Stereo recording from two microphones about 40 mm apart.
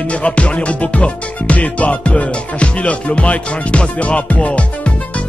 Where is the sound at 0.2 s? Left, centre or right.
Left.